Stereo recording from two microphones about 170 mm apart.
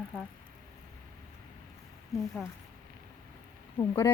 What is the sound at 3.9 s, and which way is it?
Speech, 20° left (ahead or behind).